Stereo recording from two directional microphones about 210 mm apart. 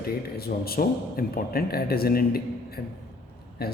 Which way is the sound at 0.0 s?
45° left (ahead or behind).